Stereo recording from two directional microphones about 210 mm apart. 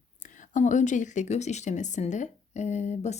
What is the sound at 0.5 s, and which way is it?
Speech, 35° left (ahead or behind).